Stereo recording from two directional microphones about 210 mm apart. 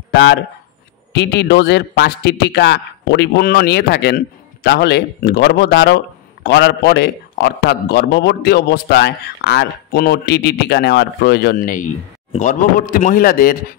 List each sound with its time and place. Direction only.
1.1 s a man's voice: 55° left (ahead or behind)